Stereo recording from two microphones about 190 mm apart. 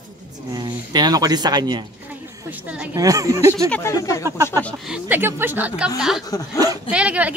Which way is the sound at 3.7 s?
15° left (ahead or behind).